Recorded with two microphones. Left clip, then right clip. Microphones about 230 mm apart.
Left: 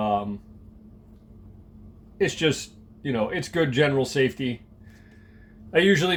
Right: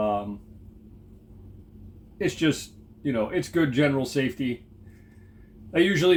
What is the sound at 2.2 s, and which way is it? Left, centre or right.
Speech, left.